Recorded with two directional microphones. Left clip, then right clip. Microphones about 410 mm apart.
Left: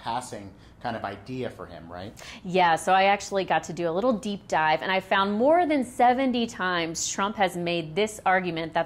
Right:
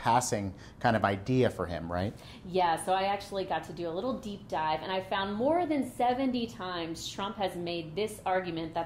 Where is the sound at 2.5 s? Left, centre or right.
Left.